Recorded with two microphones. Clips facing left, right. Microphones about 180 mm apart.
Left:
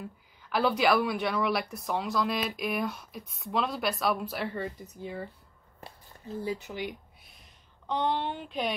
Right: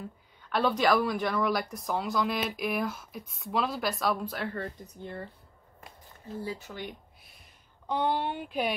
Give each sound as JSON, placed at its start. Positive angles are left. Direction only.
{"t": 0.4, "sound": "speech", "side_deg": 5}
{"t": 6.4, "sound": "speech", "side_deg": 20}
{"t": 7.9, "sound": "speech", "side_deg": -10}